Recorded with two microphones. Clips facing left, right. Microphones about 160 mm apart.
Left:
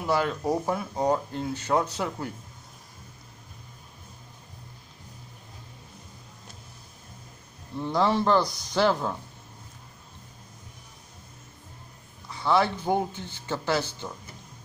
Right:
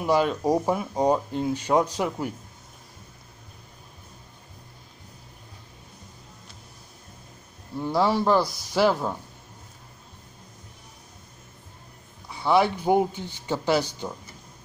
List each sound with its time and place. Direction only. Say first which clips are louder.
0.0 s speech: right 4 dB; 15° right (ahead or behind)
7.7 s speech: right 1 dB; 5° right (ahead or behind)
12.3 s speech: right 3 dB; 10° right (ahead or behind)